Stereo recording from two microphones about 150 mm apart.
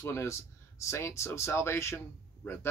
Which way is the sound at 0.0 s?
15° left (ahead or behind).